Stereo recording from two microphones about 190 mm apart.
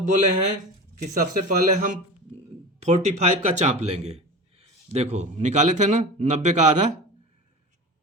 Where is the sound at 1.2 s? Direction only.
45° right (ahead or behind).